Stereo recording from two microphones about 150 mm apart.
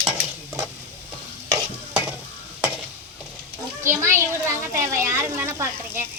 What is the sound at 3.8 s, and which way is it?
A child's voice, 20° right (ahead or behind).